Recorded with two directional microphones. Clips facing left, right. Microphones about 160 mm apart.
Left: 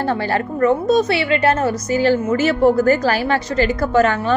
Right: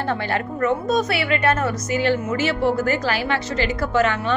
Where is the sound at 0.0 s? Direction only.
35° left (ahead or behind).